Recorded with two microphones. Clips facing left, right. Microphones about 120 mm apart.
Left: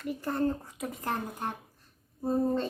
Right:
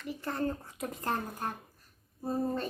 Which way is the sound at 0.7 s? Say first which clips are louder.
Left 1 dB; centre (ahead or behind).